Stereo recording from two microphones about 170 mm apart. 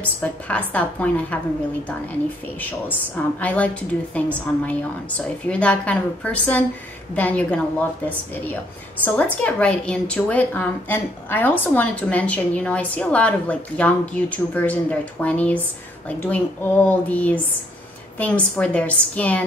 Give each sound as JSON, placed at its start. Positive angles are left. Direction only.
{"t": 0.0, "sound": "a woman's voice", "side_deg": 10}
{"t": 2.6, "sound": "a woman's voice", "side_deg": 10}
{"t": 9.0, "sound": "a woman's voice", "side_deg": 10}